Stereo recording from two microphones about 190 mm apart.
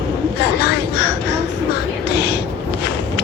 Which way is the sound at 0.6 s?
60° left (ahead or behind).